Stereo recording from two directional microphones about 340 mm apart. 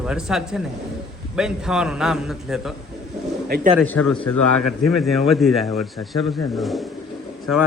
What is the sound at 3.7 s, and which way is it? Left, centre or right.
Speech, centre.